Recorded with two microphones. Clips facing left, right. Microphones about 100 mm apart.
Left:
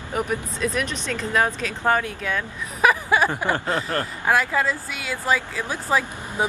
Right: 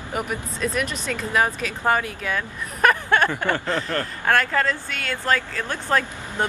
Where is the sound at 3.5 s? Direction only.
40° left (ahead or behind).